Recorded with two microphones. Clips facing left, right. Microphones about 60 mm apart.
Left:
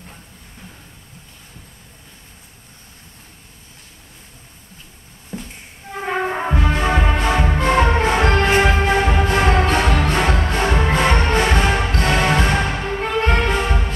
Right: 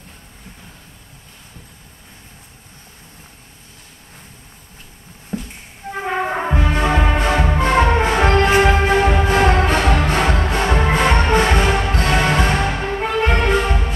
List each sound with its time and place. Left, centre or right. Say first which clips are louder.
5.3 s music: right 4 dB; right
5.9 s music: right 1 dB; centre